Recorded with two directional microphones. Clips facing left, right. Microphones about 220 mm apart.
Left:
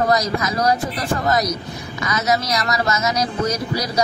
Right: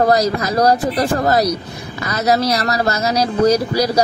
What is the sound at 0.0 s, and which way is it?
Speech, 35° right (ahead or behind).